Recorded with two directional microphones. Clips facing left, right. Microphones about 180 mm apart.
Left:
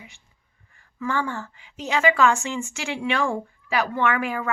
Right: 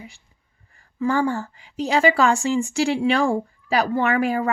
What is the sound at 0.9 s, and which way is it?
A woman's voice, 35° right (ahead or behind).